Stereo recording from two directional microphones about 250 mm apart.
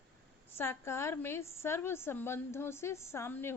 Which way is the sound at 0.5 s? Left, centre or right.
Centre.